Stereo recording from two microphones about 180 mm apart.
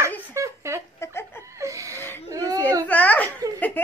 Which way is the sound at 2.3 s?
20° right (ahead or behind).